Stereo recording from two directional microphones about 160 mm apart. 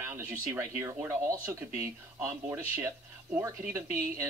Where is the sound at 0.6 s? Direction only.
20° right (ahead or behind).